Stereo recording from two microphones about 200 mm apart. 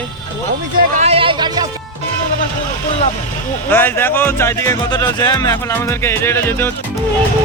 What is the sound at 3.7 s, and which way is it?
Speech, 10° left (ahead or behind).